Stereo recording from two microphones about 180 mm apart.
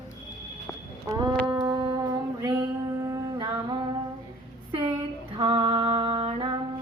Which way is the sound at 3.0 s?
20° right (ahead or behind).